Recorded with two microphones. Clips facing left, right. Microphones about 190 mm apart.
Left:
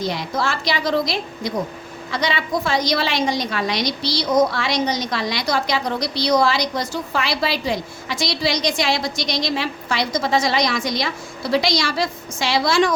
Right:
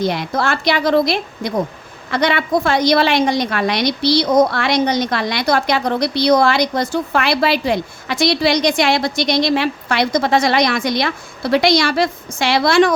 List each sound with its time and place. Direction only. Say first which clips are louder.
0.0 s a woman's voice: right 4 dB; 60° right (ahead or behind)